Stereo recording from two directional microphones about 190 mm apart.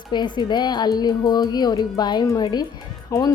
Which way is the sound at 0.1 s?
25° left (ahead or behind).